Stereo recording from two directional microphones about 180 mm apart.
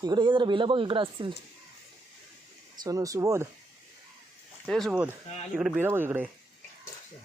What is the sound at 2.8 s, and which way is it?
Speech, 20° right (ahead or behind).